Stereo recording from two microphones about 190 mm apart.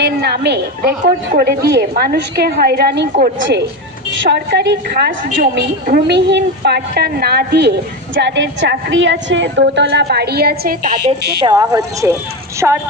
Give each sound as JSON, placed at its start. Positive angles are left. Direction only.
{"t": 0.0, "sound": "a woman's voice", "side_deg": -60}
{"t": 11.4, "sound": "a woman's voice", "side_deg": -20}